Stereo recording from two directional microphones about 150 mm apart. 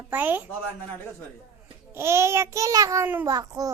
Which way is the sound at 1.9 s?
15° right (ahead or behind).